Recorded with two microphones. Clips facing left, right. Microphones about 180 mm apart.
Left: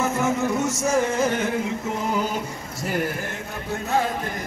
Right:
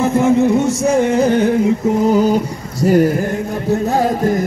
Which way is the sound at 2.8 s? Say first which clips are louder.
Right 14 dB; 35° right (ahead or behind).